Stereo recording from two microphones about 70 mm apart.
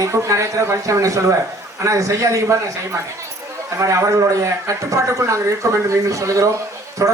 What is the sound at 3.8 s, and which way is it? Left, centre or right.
Speech, right.